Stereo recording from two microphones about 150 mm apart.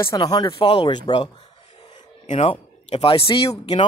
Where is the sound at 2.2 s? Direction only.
45° left (ahead or behind).